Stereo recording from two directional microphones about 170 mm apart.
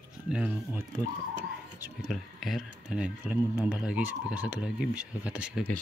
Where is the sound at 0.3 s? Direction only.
5° right (ahead or behind).